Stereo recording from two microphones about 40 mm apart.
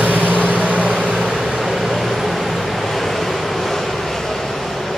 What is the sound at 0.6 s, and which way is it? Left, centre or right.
Vehicle, right.